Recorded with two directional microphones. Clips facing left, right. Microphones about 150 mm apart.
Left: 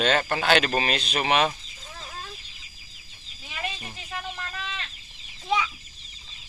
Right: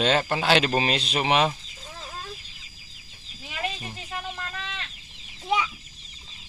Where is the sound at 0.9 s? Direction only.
25° right (ahead or behind).